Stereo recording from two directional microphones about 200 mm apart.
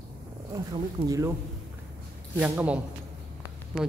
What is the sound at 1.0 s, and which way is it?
Speech, 15° right (ahead or behind).